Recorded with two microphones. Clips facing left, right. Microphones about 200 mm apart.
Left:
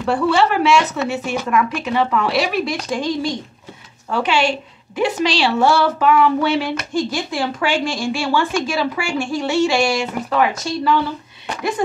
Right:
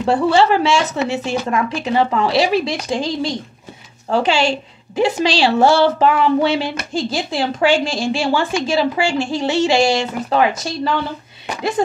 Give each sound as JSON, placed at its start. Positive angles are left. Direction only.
{"t": 0.0, "sound": "a woman's voice", "side_deg": -30}